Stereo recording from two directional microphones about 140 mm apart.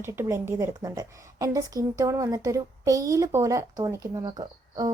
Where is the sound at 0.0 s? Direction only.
20° right (ahead or behind).